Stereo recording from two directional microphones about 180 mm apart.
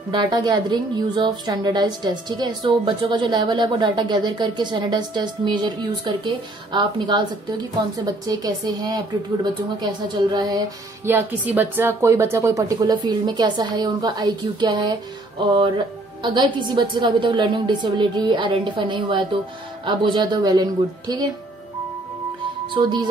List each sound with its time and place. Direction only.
0.1 s a woman's voice: 25° right (ahead or behind)
11.1 s a woman's voice: 10° right (ahead or behind)
16.2 s a woman's voice: 25° right (ahead or behind)
22.8 s a woman's voice: 25° right (ahead or behind)